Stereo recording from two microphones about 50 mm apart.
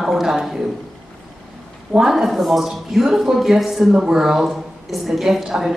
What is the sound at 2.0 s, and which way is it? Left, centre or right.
A woman's voice, centre.